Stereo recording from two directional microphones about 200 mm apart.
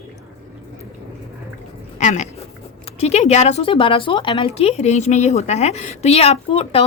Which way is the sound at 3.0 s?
35° left (ahead or behind).